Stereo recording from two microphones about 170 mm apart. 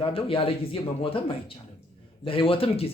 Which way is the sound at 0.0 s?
30° left (ahead or behind).